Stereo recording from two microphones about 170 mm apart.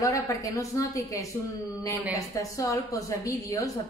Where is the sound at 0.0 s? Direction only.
20° left (ahead or behind).